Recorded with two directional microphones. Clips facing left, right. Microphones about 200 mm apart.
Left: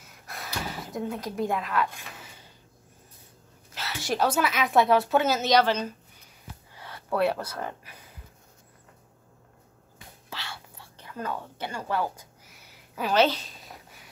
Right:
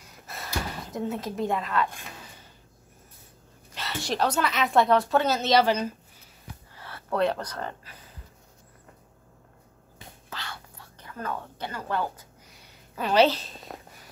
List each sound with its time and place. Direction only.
0.3 s gasp: centre (ahead or behind)
3.7 s a woman's voice: 5° left (ahead or behind)
6.7 s speech: 15° left (ahead or behind)
10.3 s whispering: 10° left (ahead or behind)
11.1 s a woman's voice: 15° left (ahead or behind)
13.7 s a sound: 60° right (ahead or behind)